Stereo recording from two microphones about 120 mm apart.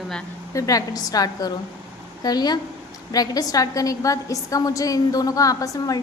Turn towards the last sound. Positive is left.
turn(degrees=30)  # may be behind; listen again after turning